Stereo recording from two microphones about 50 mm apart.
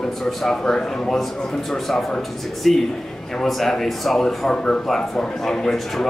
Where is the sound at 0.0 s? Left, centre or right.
Centre.